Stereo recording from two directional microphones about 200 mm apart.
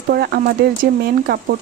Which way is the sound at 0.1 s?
50° right (ahead or behind).